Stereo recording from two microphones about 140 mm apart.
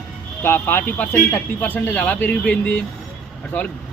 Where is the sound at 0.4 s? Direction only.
15° left (ahead or behind).